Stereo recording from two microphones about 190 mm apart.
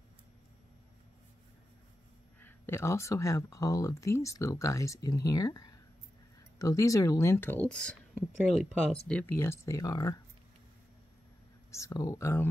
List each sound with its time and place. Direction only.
2.4 s speech: 10° left (ahead or behind)
11.7 s speech: 15° left (ahead or behind)